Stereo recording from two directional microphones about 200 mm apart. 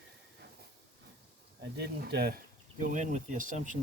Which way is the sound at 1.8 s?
55° right (ahead or behind).